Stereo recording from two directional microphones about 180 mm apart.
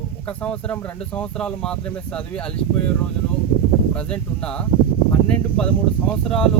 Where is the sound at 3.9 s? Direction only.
5° left (ahead or behind).